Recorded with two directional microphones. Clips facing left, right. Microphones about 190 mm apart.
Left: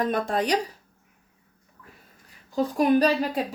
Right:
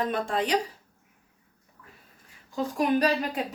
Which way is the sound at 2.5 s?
35° left (ahead or behind).